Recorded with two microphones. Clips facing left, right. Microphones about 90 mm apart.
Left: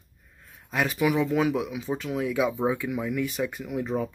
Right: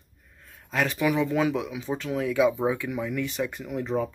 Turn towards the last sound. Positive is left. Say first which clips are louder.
# right 1 dB
turn(degrees=5)  # may be behind; listen again after turning